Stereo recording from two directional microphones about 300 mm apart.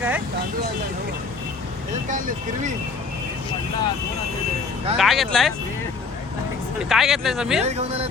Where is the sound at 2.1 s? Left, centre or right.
Right.